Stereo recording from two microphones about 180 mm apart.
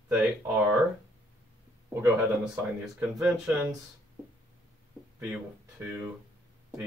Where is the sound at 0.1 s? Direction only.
5° right (ahead or behind).